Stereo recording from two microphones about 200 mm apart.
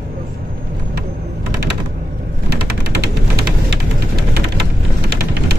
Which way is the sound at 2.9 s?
50° right (ahead or behind).